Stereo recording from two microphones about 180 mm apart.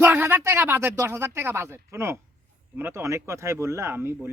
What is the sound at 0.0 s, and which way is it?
Speech, 10° right (ahead or behind).